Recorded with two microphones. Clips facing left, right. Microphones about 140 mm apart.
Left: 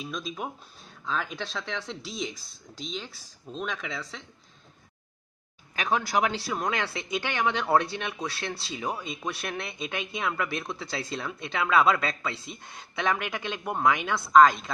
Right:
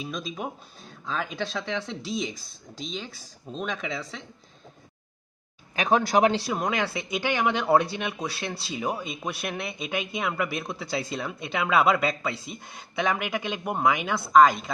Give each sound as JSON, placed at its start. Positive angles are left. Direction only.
{"t": 0.0, "sound": "speech", "side_deg": -5}
{"t": 5.8, "sound": "speech", "side_deg": -20}